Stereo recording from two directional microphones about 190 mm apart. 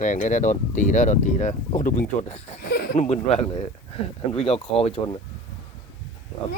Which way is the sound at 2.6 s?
55° left (ahead or behind).